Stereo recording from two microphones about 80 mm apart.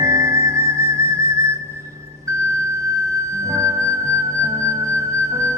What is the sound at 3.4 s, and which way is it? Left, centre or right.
Music, right.